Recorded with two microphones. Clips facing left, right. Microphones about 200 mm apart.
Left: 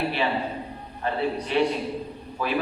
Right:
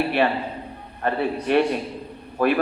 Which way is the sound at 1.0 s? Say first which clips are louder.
Right 4 dB; 55° right (ahead or behind).